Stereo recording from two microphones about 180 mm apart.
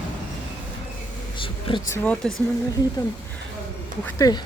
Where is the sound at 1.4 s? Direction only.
30° left (ahead or behind).